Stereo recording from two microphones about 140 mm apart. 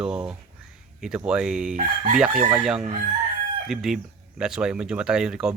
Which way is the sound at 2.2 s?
5° right (ahead or behind).